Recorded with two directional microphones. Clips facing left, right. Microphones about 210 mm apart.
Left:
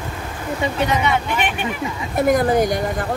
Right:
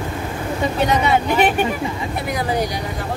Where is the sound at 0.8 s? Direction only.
35° right (ahead or behind).